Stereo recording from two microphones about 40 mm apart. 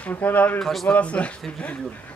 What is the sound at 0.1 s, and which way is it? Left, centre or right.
Speech, left.